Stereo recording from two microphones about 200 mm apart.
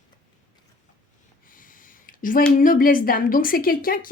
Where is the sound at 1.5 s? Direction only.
45° left (ahead or behind).